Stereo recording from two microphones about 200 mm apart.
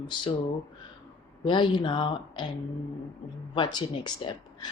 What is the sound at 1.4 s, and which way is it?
A woman's voice, 25° left (ahead or behind).